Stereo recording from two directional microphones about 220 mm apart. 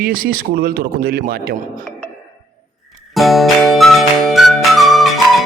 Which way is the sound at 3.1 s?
Centre (ahead or behind).